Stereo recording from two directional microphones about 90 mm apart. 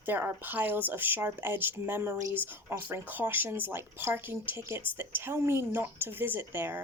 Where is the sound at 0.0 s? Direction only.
20° right (ahead or behind).